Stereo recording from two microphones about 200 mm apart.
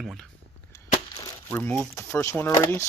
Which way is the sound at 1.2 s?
15° left (ahead or behind).